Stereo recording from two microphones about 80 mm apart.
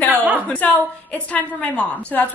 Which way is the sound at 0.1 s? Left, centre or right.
Right.